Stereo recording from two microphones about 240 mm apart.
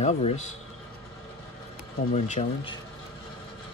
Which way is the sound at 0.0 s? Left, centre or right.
Left.